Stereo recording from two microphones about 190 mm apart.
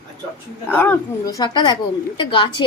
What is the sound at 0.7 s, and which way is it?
A woman's voice, 10° left (ahead or behind).